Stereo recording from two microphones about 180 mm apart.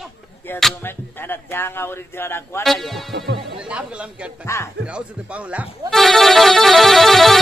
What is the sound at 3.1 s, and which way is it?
Speech, 70° right (ahead or behind).